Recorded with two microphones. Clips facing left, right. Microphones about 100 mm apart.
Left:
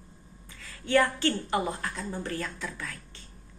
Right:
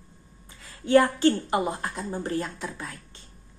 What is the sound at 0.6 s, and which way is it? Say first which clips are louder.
A woman's voice: right 5 dB; 30° right (ahead or behind).